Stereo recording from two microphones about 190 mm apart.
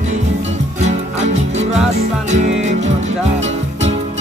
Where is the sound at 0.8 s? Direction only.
35° right (ahead or behind).